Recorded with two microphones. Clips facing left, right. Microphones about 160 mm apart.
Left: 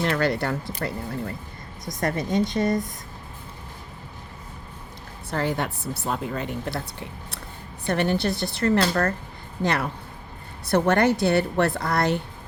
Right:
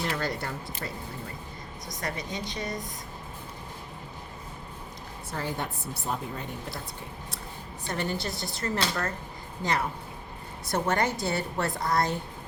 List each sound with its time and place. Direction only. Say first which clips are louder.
0.0 s a woman's voice: left 8 dB; 70° left (ahead or behind)
0.8 s speech: left 9 dB; 60° left (ahead or behind)
5.3 s a woman's voice: left 7 dB; 75° left (ahead or behind)
7.9 s speech: left 8 dB; 65° left (ahead or behind)
10.7 s a woman's voice: left 7 dB; 65° left (ahead or behind)